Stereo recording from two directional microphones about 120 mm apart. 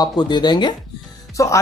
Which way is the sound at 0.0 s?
35° left (ahead or behind).